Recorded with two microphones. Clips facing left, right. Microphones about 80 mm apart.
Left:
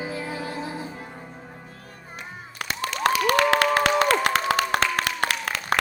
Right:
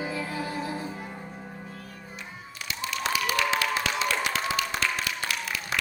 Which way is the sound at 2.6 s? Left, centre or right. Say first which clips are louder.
Left 7 dB; left.